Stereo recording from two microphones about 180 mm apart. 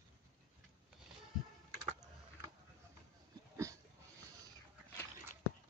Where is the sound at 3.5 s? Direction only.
15° right (ahead or behind).